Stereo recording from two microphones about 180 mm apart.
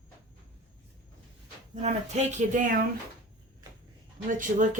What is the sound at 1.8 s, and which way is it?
Speech, 40° right (ahead or behind).